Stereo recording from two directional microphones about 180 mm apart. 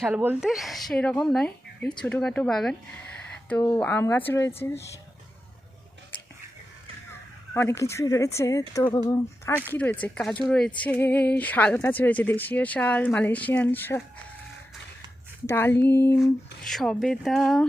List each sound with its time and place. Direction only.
0.2 s a woman's voice: 5° right (ahead or behind); by 4.5 s 15° left (ahead or behind)
7.5 s a woman's voice: 15° left (ahead or behind)
9.6 s a woman's voice: 10° left (ahead or behind)
15.4 s a woman's voice: 15° left (ahead or behind)
16.1 s speech: centre (ahead or behind)